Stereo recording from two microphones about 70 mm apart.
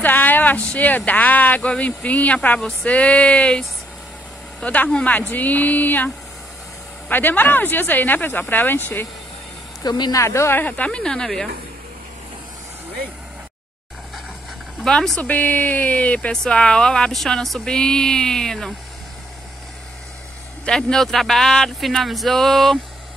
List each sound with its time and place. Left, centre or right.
0.0 s speech: left
9.8 s speech: left
10.1 s speech: left
10.9 s speech: centre
14.9 s speech: centre
20.6 s speech: centre